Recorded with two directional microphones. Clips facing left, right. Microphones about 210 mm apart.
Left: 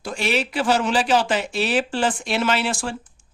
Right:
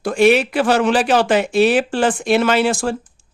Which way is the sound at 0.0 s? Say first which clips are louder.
Right 11 dB; 55° right (ahead or behind).